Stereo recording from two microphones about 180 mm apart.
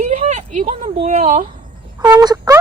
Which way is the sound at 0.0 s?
40° right (ahead or behind).